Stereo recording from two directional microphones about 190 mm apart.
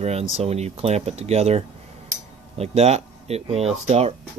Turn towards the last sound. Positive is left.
turn(degrees=-35)  # may be behind; listen again after turning